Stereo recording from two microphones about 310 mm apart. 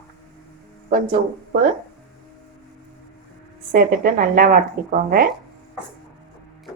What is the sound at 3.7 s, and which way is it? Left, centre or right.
A woman's voice, right.